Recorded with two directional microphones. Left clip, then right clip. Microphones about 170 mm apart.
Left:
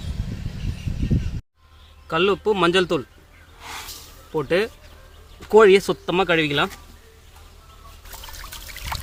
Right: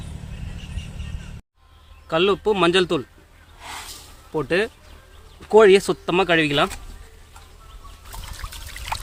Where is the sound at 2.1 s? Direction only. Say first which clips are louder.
Right 1 dB; 20° right (ahead or behind).